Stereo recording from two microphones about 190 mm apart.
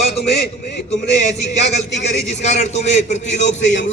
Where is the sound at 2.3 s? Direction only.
35° left (ahead or behind).